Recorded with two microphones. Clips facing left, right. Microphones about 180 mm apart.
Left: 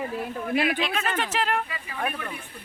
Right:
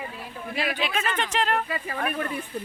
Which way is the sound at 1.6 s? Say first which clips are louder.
Right 2 dB; 50° right (ahead or behind).